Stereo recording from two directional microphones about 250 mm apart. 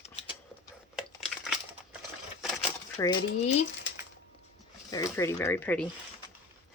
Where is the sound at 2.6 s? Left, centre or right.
Centre.